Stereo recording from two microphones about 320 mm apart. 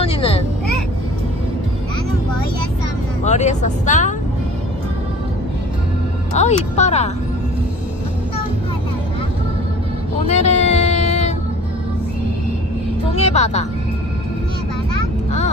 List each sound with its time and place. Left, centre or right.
0.0 s vehicle: centre
3.3 s speech: left
6.3 s speech: left
10.2 s vehicle: left
13.1 s music: centre